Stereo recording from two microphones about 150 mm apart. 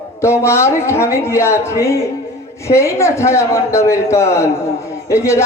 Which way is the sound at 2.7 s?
20° left (ahead or behind).